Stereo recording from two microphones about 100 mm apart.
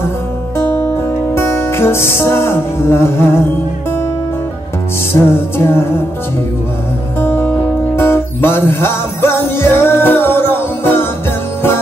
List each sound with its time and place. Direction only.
0.6 s music: 20° left (ahead or behind)
5.2 s music: 25° left (ahead or behind)
7.2 s music: 20° left (ahead or behind)